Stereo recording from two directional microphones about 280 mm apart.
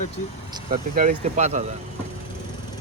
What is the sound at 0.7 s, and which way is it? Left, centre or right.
Speech, right.